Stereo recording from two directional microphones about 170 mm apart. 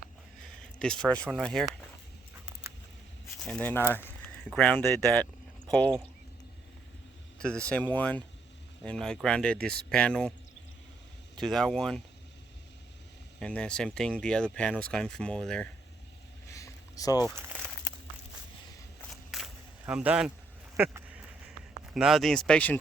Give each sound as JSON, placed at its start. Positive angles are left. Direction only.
{"t": 0.8, "sound": "speech", "side_deg": 5}
{"t": 3.4, "sound": "speech", "side_deg": 10}
{"t": 7.3, "sound": "speech", "side_deg": 5}
{"t": 11.3, "sound": "speech", "side_deg": 0}
{"t": 13.4, "sound": "speech", "side_deg": 5}
{"t": 16.5, "sound": "a sound", "side_deg": 20}
{"t": 19.1, "sound": "a sound", "side_deg": 0}
{"t": 19.9, "sound": "speech", "side_deg": -5}
{"t": 20.7, "sound": "a sound", "side_deg": -10}
{"t": 21.9, "sound": "speech", "side_deg": -5}